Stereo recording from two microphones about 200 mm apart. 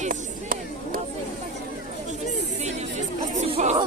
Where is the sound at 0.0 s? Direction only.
40° right (ahead or behind).